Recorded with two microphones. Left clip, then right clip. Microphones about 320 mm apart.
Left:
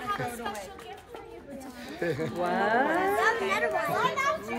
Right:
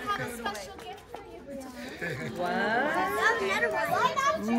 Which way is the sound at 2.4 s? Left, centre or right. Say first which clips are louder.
Left 2 dB; left.